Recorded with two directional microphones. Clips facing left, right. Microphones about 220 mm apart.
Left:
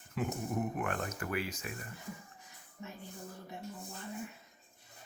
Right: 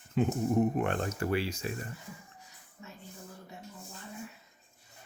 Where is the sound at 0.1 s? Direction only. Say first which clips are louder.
Right 8 dB; 25° right (ahead or behind).